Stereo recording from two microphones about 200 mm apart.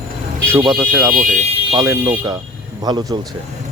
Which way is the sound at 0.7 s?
10° right (ahead or behind).